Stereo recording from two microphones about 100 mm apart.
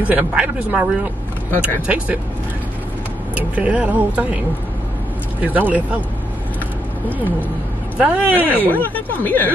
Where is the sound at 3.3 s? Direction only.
15° right (ahead or behind).